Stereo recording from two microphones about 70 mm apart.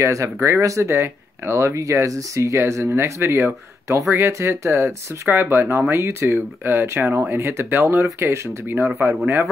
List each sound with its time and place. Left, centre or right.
0.0 s speech: right